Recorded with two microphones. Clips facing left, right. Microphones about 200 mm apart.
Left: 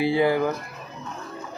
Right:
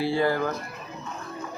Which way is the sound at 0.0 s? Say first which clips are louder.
Left 3 dB; 15° left (ahead or behind).